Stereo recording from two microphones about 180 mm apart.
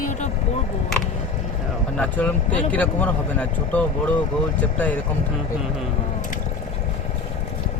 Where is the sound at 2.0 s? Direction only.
10° left (ahead or behind).